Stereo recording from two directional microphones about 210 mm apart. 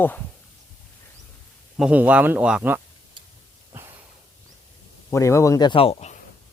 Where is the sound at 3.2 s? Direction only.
25° right (ahead or behind).